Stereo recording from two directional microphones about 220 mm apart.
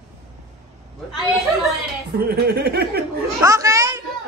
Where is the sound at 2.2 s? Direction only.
45° right (ahead or behind).